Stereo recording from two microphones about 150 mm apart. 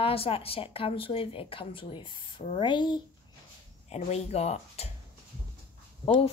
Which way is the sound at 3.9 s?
45° left (ahead or behind).